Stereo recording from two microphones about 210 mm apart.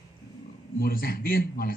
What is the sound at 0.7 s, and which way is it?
Speech, 45° left (ahead or behind).